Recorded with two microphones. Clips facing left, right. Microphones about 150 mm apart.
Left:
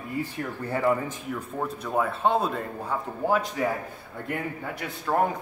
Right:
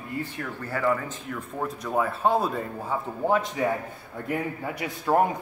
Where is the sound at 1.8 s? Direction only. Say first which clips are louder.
Right 1 dB; centre (ahead or behind).